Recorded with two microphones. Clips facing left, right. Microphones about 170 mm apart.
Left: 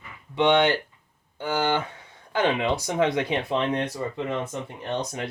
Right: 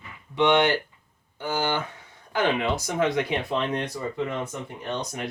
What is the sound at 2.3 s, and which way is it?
Speech, 20° left (ahead or behind).